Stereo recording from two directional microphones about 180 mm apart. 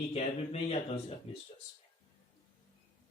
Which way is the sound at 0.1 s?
35° left (ahead or behind).